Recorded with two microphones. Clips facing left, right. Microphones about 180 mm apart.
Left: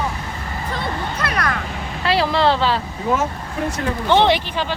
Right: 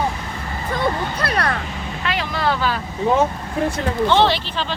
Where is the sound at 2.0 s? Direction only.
35° left (ahead or behind).